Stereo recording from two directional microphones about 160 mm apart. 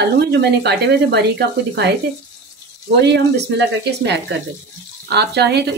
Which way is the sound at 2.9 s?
90° right.